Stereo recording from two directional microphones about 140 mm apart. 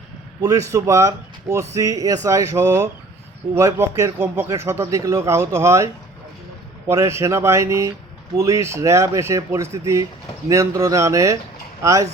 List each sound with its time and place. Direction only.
0.7 s speech: 25° right (ahead or behind)